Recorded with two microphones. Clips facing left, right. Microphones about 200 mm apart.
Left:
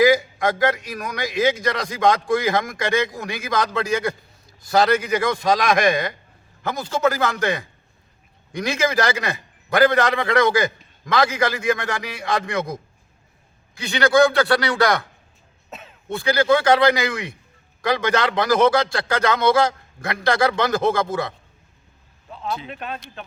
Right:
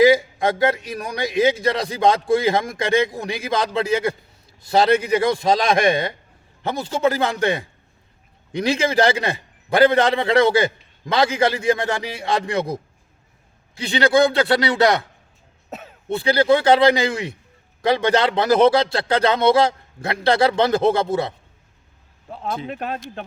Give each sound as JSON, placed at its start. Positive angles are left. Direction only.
{"t": 0.0, "sound": "a man's voice", "side_deg": -30}
{"t": 15.7, "sound": "throat clearing", "side_deg": -40}
{"t": 16.1, "sound": "a man's voice", "side_deg": -30}
{"t": 22.3, "sound": "speech", "side_deg": -50}